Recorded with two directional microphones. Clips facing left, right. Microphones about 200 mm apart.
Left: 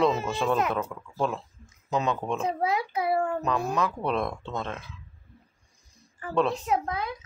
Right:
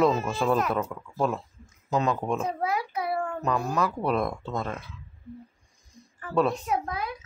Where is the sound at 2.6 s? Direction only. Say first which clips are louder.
Left 2 dB; 20° left (ahead or behind).